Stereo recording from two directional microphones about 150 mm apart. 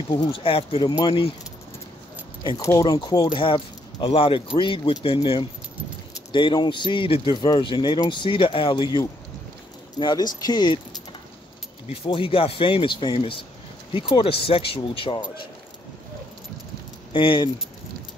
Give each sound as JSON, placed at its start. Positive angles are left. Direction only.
{"t": 0.1, "sound": "speech", "side_deg": 30}
{"t": 2.4, "sound": "speech", "side_deg": 25}
{"t": 17.1, "sound": "speech", "side_deg": 35}